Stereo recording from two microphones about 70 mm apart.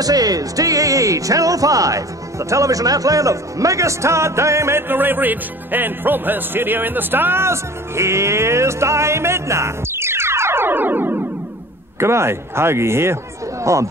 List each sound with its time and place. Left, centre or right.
0.0 s speech: right
12.0 s speech: right